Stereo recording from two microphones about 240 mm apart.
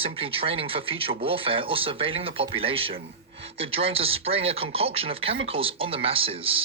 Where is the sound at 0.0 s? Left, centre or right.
Right.